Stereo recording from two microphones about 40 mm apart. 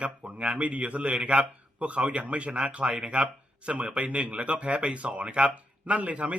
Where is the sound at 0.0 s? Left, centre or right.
Right.